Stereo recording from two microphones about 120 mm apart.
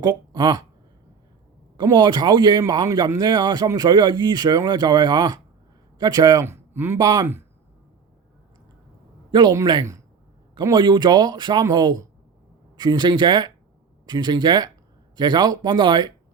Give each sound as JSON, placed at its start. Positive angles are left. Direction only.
{"t": 0.0, "sound": "speech", "side_deg": -35}
{"t": 1.7, "sound": "a man's voice", "side_deg": -35}
{"t": 9.3, "sound": "a man's voice", "side_deg": -35}